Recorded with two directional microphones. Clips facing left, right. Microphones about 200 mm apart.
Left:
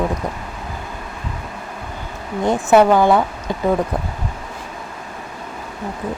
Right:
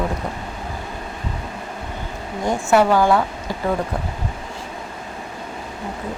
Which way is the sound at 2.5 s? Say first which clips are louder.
Left 3 dB; 20° left (ahead or behind).